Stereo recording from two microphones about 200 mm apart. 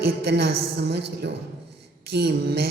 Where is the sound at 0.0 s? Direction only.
55° right (ahead or behind).